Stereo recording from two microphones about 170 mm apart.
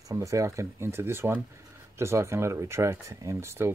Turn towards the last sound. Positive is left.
turn(degrees=-15)  # may be behind; listen again after turning